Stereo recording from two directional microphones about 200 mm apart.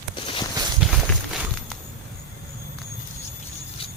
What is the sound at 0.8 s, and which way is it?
Walk, centre (ahead or behind).